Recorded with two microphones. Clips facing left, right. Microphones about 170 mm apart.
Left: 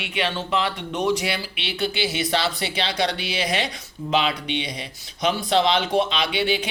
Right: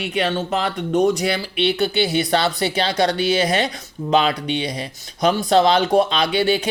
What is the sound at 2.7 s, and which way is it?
Speech, 50° right (ahead or behind).